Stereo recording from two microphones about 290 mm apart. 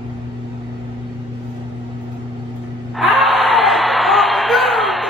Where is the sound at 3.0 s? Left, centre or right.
Centre.